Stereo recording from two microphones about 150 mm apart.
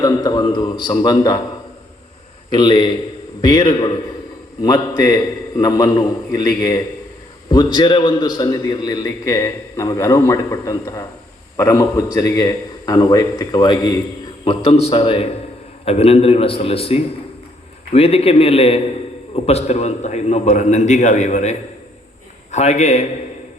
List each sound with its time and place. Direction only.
0.0 s a man's voice: 30° left (ahead or behind)
2.5 s a man's voice: 30° left (ahead or behind)
14.4 s a man's voice: 40° left (ahead or behind)
22.5 s a man's voice: 50° left (ahead or behind)